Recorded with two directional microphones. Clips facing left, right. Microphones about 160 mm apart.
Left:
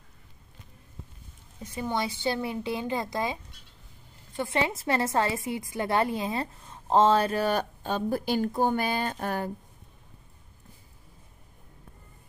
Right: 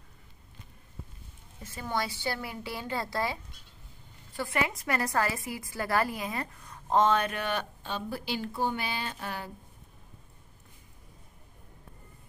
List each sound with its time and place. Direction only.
1.6 s a woman's voice: 20° left (ahead or behind)
4.4 s a woman's voice: 25° left (ahead or behind); by 9.5 s 45° left (ahead or behind)